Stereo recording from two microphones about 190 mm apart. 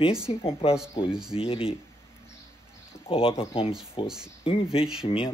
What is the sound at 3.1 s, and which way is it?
Speech, 30° left (ahead or behind).